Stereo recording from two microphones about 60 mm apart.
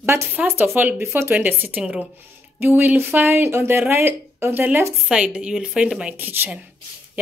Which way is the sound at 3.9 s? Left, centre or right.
Right.